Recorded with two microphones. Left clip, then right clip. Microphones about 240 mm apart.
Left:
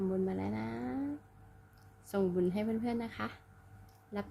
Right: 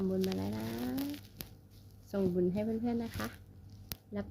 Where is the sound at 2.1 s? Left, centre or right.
Centre.